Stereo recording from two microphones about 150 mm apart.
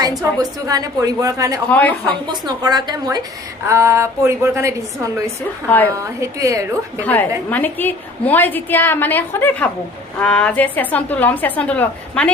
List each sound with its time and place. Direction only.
0.0 s a woman's voice: 25° right (ahead or behind)
5.6 s a woman's voice: 10° left (ahead or behind)
5.9 s a woman's voice: 20° right (ahead or behind)
7.0 s a woman's voice: 10° left (ahead or behind)